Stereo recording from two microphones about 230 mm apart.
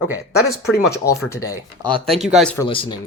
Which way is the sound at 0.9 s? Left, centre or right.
Centre.